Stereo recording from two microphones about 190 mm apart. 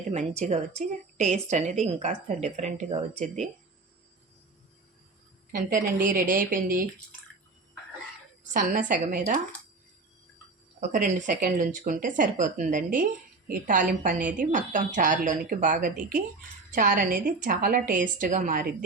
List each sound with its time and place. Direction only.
0.1 s a woman's voice: 35° right (ahead or behind)
5.5 s a woman's voice: 45° right (ahead or behind)
8.5 s a woman's voice: 45° right (ahead or behind)
10.8 s a woman's voice: 40° right (ahead or behind)